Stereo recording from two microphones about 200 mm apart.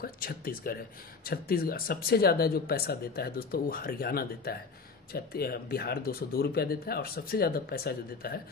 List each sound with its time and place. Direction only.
0.0 s speech: 45° left (ahead or behind)